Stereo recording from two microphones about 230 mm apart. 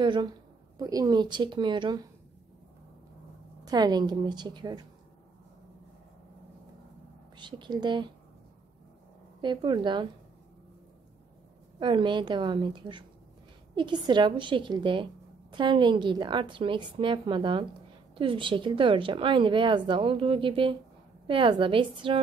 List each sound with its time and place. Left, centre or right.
0.0 s a woman's voice: right
3.6 s a woman's voice: centre
7.3 s a woman's voice: centre
9.4 s a woman's voice: centre
11.8 s a woman's voice: right